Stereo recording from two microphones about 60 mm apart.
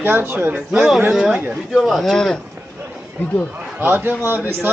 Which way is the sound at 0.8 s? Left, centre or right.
Centre.